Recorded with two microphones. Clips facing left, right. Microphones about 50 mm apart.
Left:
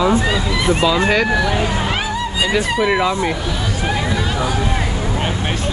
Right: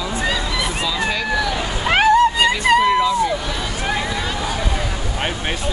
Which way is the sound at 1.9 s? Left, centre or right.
Right.